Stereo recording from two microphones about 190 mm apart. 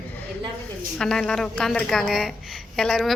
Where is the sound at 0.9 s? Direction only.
5° left (ahead or behind).